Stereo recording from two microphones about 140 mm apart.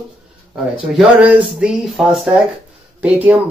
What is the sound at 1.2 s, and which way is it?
Speech, 5° right (ahead or behind).